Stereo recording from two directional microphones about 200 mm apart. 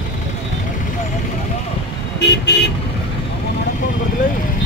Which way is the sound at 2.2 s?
55° left (ahead or behind).